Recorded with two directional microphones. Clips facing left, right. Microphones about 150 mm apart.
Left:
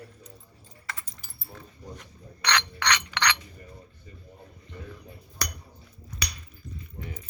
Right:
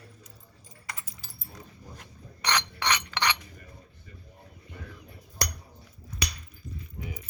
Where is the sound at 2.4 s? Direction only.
20° right (ahead or behind).